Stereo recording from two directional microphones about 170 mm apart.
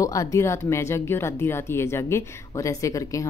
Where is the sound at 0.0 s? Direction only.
20° left (ahead or behind).